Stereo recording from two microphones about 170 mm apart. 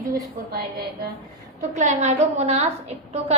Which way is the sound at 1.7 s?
45° right (ahead or behind).